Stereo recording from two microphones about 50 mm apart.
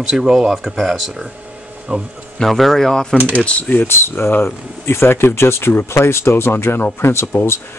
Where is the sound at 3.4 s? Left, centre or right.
Left.